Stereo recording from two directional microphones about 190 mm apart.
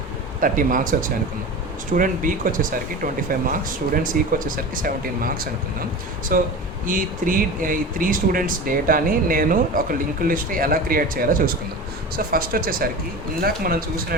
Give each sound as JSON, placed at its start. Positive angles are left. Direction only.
{"t": 0.3, "sound": "speech", "side_deg": -45}